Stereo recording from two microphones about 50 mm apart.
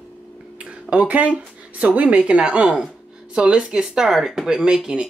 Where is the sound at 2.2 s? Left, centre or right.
Right; by 4.5 s centre.